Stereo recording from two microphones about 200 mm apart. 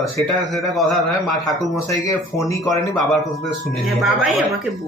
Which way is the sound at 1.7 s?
15° left (ahead or behind).